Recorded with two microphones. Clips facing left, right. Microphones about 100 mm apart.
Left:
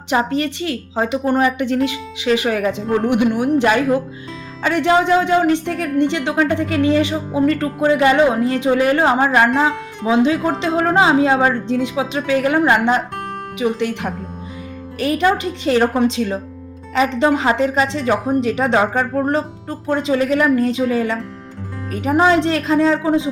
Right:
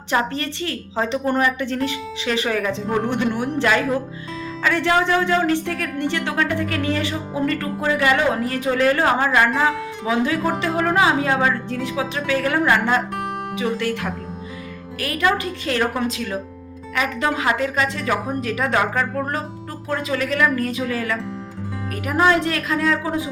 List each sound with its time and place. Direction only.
0.1 s a woman's voice: 15° left (ahead or behind)